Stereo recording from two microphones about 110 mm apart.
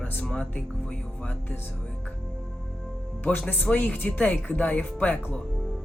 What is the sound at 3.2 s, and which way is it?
Speech, 20° left (ahead or behind).